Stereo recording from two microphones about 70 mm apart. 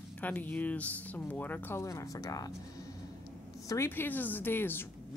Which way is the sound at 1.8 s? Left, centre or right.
Left.